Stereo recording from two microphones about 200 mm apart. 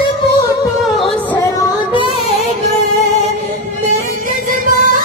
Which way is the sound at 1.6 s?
20° left (ahead or behind).